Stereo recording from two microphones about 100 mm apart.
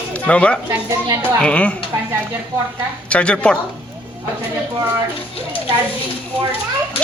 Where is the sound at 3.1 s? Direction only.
10° left (ahead or behind).